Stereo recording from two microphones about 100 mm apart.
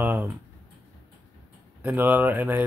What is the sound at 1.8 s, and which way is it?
Speech, 20° right (ahead or behind).